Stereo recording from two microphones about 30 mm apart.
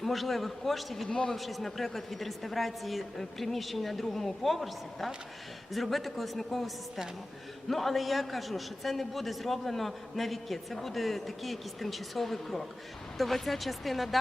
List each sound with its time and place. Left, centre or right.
0.0 s a man's voice: centre
1.0 s a man's voice: left
1.4 s a man's voice: centre